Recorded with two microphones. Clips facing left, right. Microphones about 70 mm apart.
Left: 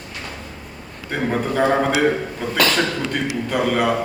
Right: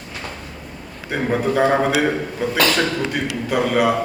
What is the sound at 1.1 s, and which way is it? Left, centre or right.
A man's voice, centre.